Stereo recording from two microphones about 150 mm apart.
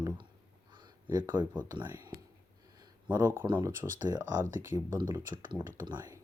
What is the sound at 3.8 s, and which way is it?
Speech, 15° right (ahead or behind).